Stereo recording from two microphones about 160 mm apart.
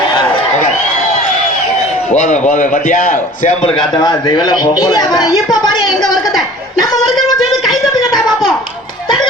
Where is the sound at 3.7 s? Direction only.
25° left (ahead or behind).